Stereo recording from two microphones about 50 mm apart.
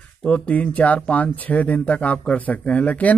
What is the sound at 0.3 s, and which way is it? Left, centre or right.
Speech, left.